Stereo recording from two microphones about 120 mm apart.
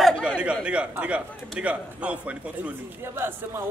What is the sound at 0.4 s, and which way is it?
A man's voice, 10° right (ahead or behind).